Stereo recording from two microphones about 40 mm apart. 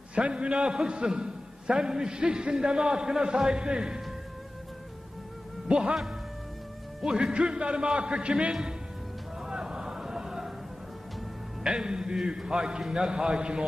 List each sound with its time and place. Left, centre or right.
0.1 s a man's voice: right
5.7 s a man's voice: right
7.1 s a man's voice: right
9.5 s vehicle: right
11.6 s a man's voice: centre